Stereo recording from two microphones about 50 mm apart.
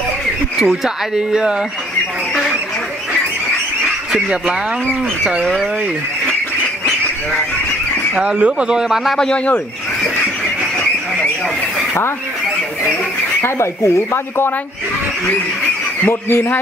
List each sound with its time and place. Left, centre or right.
0.6 s speech: centre
4.1 s speech: centre
8.1 s speech: right
9.1 s speech: centre
13.4 s speech: left
16.1 s a man's voice: left